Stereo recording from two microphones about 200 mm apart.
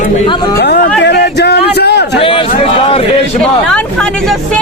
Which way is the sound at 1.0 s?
60° left (ahead or behind).